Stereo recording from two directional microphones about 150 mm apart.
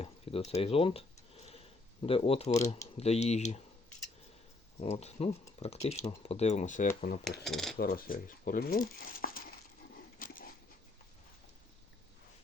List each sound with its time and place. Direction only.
0.0 s a sound: 40° left (ahead or behind)
2.0 s speech: 40° left (ahead or behind)
4.8 s speech: 45° left (ahead or behind)
7.4 s cutlery: centre (ahead or behind)
7.8 s speech: 75° left (ahead or behind)
10.2 s a sound: 75° left (ahead or behind)